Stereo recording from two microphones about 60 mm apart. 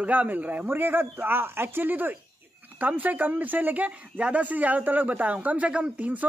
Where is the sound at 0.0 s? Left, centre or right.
Right.